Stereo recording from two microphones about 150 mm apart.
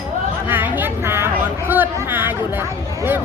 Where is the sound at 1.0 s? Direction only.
15° right (ahead or behind).